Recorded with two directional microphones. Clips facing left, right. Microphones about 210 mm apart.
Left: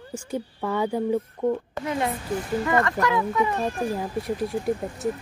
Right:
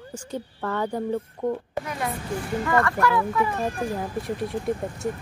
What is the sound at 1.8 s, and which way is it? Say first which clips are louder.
Speech: left 6 dB; 25° left (ahead or behind).